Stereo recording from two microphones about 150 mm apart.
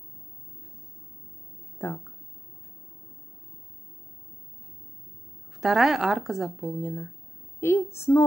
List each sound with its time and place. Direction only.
1.8 s speech: 10° left (ahead or behind)
5.6 s a woman's voice: centre (ahead or behind); by 8.2 s 15° left (ahead or behind)